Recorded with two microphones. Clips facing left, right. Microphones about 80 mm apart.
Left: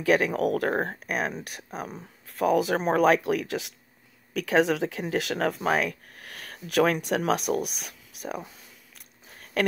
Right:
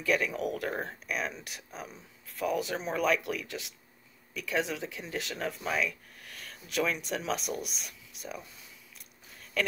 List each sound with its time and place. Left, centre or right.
0.0 s speech: left
8.9 s biting: left